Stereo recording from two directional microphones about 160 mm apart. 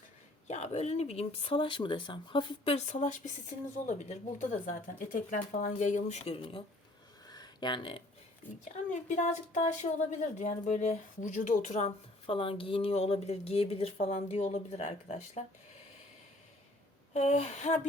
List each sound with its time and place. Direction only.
0.4 s speech: 45° left (ahead or behind)
7.3 s a sound: 25° left (ahead or behind)
8.9 s speech: 50° left (ahead or behind)
17.2 s speech: 45° left (ahead or behind)